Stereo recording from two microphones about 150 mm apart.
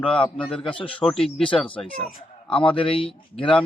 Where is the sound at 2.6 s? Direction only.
35° left (ahead or behind).